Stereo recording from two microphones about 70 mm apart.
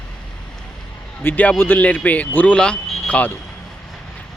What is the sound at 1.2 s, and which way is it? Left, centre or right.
Speech, left.